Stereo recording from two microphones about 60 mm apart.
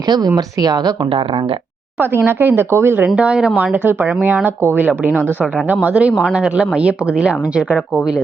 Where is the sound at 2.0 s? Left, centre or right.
Right.